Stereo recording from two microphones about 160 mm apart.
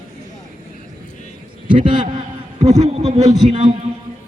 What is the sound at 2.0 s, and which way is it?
A man's voice, 45° right (ahead or behind).